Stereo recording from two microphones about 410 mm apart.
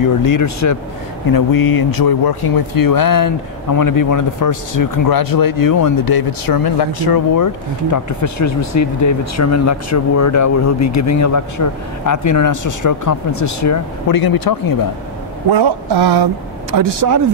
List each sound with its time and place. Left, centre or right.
0.0 s speech: left
1.3 s speech: left
15.5 s speech: right
16.7 s speech: right